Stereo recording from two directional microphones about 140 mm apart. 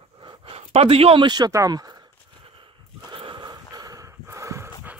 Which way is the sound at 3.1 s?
35° right (ahead or behind).